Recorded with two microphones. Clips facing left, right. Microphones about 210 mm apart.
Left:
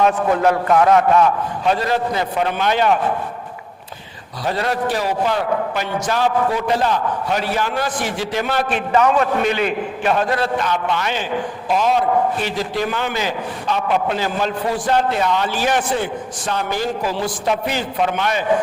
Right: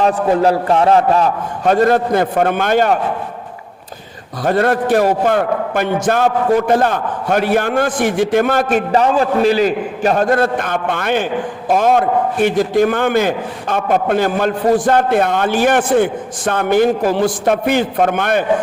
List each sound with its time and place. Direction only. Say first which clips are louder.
0.0 s a man's voice: right 3 dB; 35° right (ahead or behind)
1.6 s a man's voice: right 7 dB; 50° right (ahead or behind)
4.4 s a man's voice: right 7 dB; 55° right (ahead or behind)